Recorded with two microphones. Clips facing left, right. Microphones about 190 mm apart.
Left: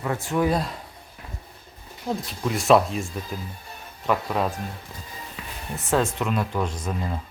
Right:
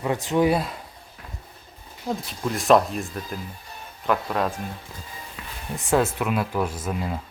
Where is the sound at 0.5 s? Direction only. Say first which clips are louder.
Right 1 dB; centre (ahead or behind).